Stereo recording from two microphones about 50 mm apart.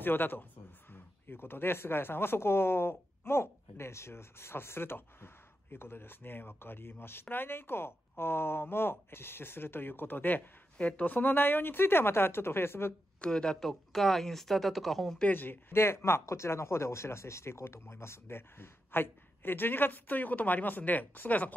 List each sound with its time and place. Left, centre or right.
0.0 s speech: left
10.8 s speech: left
13.2 s speech: centre
13.6 s speech: centre
15.2 s speech: left
15.7 s speech: left